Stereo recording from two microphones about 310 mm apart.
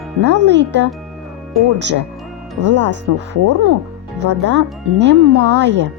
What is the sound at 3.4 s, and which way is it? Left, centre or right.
Speech, right.